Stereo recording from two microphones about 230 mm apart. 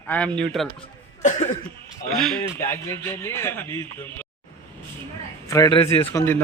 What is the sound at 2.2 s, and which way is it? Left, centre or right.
Speech, centre.